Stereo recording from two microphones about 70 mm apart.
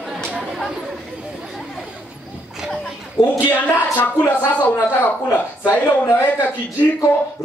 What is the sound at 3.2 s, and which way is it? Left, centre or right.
Speech, centre.